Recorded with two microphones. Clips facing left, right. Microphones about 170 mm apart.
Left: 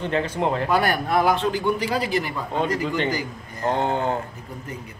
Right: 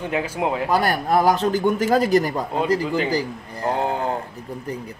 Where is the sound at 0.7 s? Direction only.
35° right (ahead or behind).